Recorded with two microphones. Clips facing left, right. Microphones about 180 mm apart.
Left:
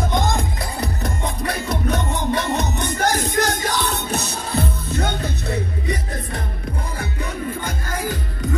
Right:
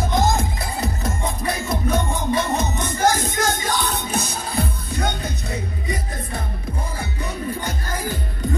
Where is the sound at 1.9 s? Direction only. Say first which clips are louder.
Right 2 dB; 65° left (ahead or behind).